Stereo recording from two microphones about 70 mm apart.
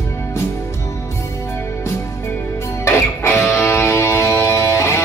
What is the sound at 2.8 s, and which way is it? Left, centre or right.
Music, left.